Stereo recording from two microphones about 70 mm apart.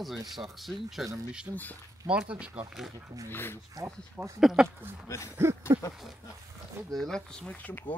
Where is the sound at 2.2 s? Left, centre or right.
Centre.